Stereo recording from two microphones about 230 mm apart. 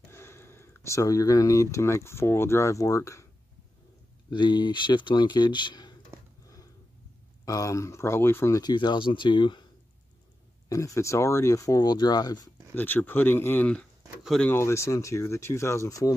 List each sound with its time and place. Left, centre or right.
0.1 s speech: centre
4.3 s speech: centre
7.4 s speech: centre
10.7 s speech: centre